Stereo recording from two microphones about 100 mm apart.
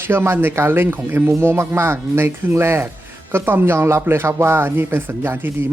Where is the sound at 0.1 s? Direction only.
25° right (ahead or behind).